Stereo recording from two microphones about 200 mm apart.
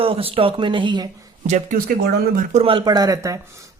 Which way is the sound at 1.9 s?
50° right (ahead or behind).